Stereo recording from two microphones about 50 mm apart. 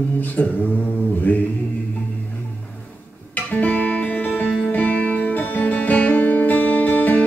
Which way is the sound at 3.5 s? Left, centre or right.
Left.